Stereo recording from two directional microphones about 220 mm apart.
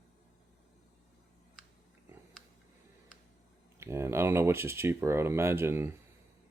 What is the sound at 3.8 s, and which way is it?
Speech, 10° right (ahead or behind).